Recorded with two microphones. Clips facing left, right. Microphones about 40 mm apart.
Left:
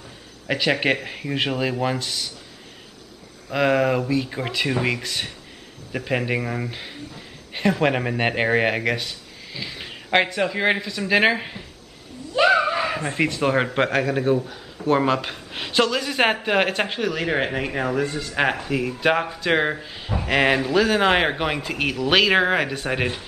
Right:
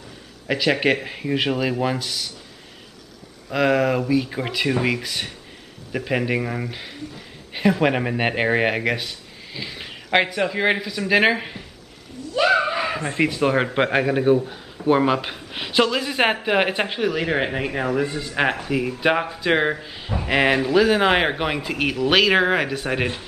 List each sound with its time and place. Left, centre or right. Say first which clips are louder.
0.5 s speech: right 1 dB; centre
3.5 s speech: even; centre